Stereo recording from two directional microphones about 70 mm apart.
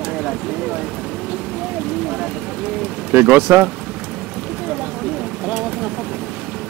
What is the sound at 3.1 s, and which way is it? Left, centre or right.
Speech, right.